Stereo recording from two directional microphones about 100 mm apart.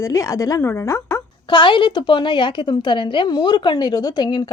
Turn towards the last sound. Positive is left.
turn(degrees=45)  # may be behind; listen again after turning